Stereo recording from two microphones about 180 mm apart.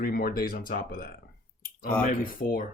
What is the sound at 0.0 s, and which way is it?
Speech, 55° left (ahead or behind).